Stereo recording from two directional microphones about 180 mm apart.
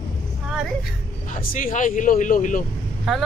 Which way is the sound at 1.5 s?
45° left (ahead or behind).